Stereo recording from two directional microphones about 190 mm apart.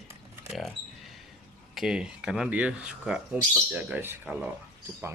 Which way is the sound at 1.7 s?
5° right (ahead or behind).